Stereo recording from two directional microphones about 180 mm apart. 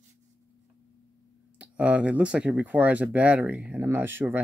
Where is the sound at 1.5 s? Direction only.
5° right (ahead or behind).